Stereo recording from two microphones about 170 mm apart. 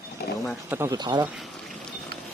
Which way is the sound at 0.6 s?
15° right (ahead or behind).